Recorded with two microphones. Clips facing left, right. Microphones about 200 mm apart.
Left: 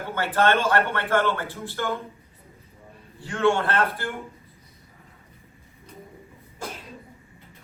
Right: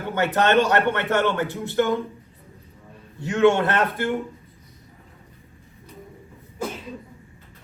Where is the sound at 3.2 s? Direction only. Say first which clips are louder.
Right 5 dB; 20° right (ahead or behind).